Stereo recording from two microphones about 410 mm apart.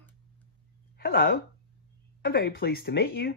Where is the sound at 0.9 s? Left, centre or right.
Left.